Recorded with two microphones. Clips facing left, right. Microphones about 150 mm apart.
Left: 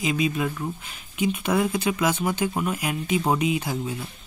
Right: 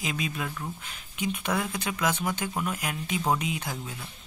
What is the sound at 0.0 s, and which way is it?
Speech, 5° left (ahead or behind).